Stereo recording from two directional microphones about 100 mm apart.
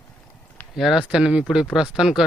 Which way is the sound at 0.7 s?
5° right (ahead or behind).